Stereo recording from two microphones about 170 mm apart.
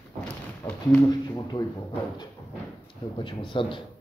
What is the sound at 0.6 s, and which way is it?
Speech, 25° left (ahead or behind).